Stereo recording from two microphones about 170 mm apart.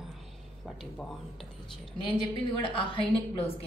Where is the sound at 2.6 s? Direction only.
30° left (ahead or behind).